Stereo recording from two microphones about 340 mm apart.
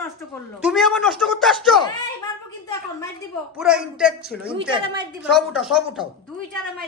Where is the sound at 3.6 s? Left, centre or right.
Centre.